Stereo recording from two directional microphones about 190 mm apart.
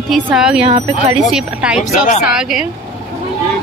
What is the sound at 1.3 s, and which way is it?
Speech, 5° right (ahead or behind).